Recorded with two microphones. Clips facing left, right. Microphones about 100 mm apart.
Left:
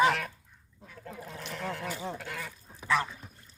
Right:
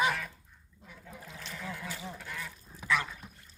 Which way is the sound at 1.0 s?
55° left (ahead or behind).